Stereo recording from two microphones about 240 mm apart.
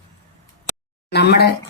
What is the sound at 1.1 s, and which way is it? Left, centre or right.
Speech, left.